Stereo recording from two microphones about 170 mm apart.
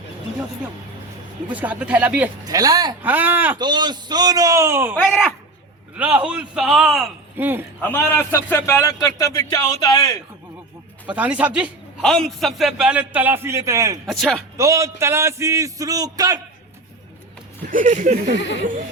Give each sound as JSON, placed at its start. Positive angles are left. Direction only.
{"t": 1.5, "sound": "a man's voice", "side_deg": -10}
{"t": 2.5, "sound": "a man's voice", "side_deg": -20}
{"t": 3.0, "sound": "a man's voice", "side_deg": -10}
{"t": 3.6, "sound": "a man's voice", "side_deg": -25}
{"t": 6.0, "sound": "a man's voice", "side_deg": -10}
{"t": 7.8, "sound": "a man's voice", "side_deg": 10}
{"t": 11.0, "sound": "a man's voice", "side_deg": -10}
{"t": 14.1, "sound": "speech", "side_deg": 0}
{"t": 14.5, "sound": "a man's voice", "side_deg": -15}
{"t": 17.7, "sound": "speech", "side_deg": -50}
{"t": 18.3, "sound": "speech", "side_deg": 90}